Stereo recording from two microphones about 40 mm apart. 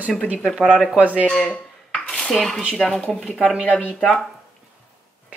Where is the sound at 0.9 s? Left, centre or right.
Right.